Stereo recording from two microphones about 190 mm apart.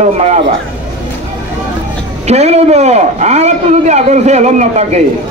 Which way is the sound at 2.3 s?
35° right (ahead or behind).